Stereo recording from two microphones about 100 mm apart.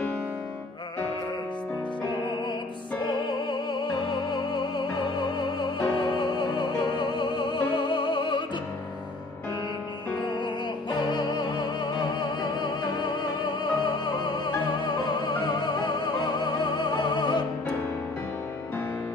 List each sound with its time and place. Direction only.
4.3 s music: 50° left (ahead or behind)
10.4 s music: 50° left (ahead or behind)